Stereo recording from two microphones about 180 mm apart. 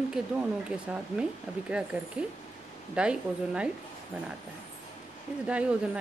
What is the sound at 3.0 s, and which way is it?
Speech, 5° right (ahead or behind).